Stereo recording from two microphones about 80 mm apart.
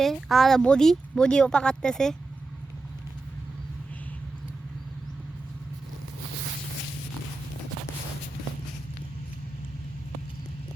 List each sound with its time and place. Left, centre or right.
0.0 s speech: centre